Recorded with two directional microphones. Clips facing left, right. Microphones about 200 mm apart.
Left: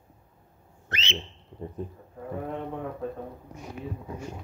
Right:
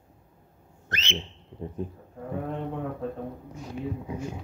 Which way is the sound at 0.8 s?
40° right (ahead or behind).